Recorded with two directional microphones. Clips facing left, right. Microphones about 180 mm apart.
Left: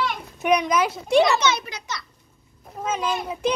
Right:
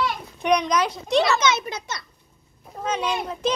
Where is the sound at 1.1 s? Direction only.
15° left (ahead or behind).